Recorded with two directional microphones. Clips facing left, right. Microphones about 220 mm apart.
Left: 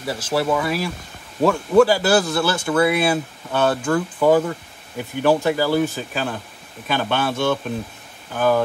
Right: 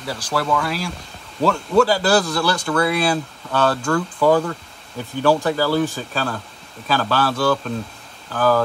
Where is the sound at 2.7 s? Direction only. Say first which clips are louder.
Left 3 dB; 5° left (ahead or behind).